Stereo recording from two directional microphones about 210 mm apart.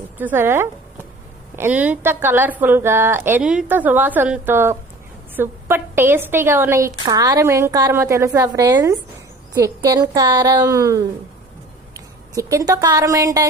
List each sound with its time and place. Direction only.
0.2 s a woman's voice: 10° right (ahead or behind)